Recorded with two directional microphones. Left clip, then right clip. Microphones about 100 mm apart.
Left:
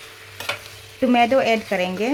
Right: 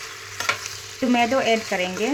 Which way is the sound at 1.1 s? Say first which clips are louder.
Left 3 dB; 35° left (ahead or behind).